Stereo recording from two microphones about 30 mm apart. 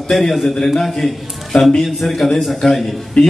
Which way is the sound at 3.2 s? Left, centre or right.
Left.